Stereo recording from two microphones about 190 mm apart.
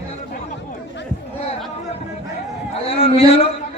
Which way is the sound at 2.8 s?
30° left (ahead or behind).